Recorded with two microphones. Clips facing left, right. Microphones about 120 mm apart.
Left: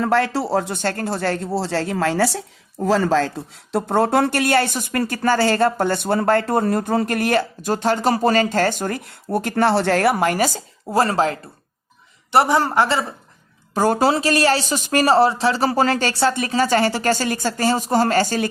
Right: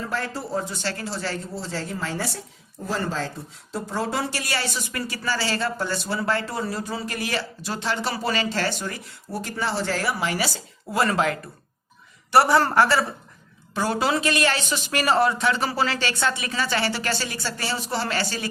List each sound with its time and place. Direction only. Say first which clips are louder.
0.0 s speech: left 10 dB; 75° left (ahead or behind)
2.8 s speech: left 10 dB; 90° left; by 11.3 s 30° left (ahead or behind)
12.3 s a man's voice: left 1 dB; 20° left (ahead or behind)
13.7 s speech: left 6 dB; 45° left (ahead or behind)